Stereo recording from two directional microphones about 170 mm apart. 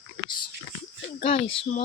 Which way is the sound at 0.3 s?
25° left (ahead or behind).